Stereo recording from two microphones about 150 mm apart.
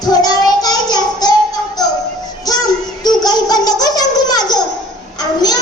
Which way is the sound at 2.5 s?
25° left (ahead or behind).